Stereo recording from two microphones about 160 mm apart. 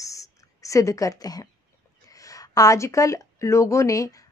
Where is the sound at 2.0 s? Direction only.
20° left (ahead or behind).